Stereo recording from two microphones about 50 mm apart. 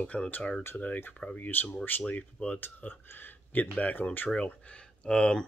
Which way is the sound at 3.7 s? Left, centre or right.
Left.